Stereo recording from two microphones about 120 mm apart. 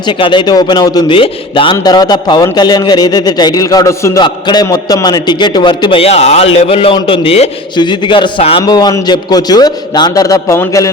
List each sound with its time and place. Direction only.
0.0 s a man's voice: 40° left (ahead or behind)
1.1 s a man's voice: 45° left (ahead or behind)
1.7 s a man's voice: 35° left (ahead or behind)
4.2 s a man's voice: 35° left (ahead or behind); by 7.5 s 55° left (ahead or behind)
7.8 s a man's voice: 40° left (ahead or behind)
8.6 s a man's voice: 30° left (ahead or behind)